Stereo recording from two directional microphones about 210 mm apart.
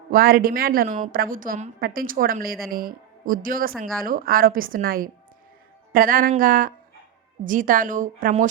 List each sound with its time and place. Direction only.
0.1 s a woman's voice: 45° right (ahead or behind)